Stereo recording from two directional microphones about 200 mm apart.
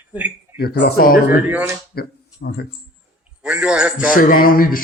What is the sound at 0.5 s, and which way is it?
Speech, 50° left (ahead or behind).